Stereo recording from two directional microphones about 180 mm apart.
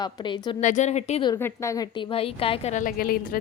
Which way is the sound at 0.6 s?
40° left (ahead or behind).